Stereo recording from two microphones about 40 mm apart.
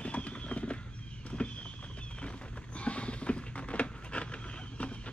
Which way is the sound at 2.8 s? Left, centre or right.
Left.